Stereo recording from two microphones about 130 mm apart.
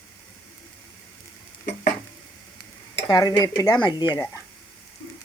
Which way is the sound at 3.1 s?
30° left (ahead or behind).